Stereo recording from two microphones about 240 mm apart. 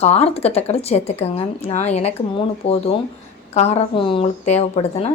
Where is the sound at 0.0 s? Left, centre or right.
Left.